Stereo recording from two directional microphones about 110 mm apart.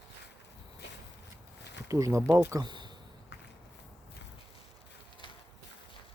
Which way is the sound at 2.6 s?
40° right (ahead or behind).